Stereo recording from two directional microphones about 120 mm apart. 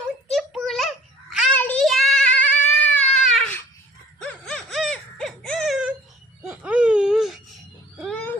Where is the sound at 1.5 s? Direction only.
15° left (ahead or behind).